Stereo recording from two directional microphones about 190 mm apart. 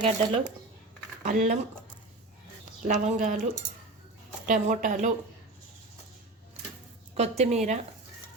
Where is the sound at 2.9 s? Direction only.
40° right (ahead or behind).